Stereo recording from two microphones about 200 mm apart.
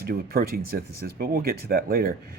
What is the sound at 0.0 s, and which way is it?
Speech, 50° right (ahead or behind).